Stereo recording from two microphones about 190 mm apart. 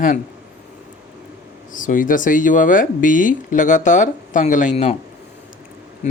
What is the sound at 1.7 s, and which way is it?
Speech, 45° left (ahead or behind).